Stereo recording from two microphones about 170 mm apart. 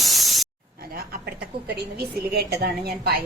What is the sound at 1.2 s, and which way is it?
A woman's voice, 70° right (ahead or behind).